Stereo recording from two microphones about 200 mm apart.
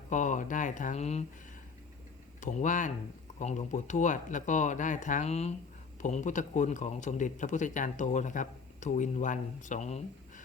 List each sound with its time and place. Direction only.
0.1 s speech: 40° left (ahead or behind)
2.4 s speech: 40° left (ahead or behind)